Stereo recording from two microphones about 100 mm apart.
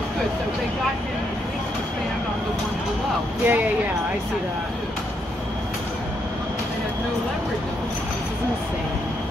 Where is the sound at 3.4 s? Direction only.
15° right (ahead or behind).